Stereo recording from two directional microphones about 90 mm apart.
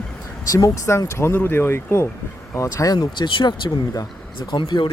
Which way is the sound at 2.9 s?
60° left (ahead or behind).